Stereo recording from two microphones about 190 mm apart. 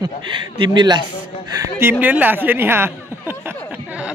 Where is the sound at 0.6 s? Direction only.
25° right (ahead or behind).